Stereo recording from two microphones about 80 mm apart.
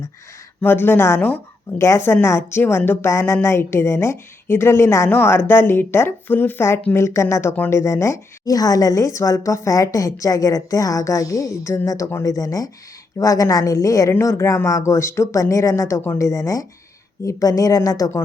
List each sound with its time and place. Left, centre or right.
0.6 s speech: left
14.1 s speech: left